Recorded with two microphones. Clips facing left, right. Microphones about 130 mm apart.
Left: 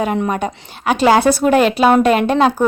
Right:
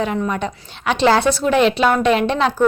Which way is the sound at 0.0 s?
50° left (ahead or behind).